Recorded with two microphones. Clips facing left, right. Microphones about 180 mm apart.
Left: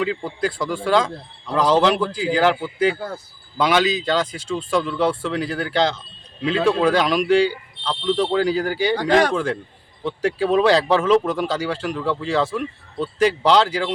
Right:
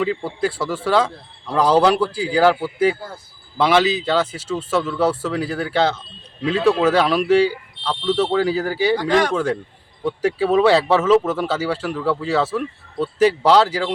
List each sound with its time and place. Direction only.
0.0 s speech: 10° right (ahead or behind)
9.0 s speech: 40° left (ahead or behind)
9.3 s speech: 10° right (ahead or behind)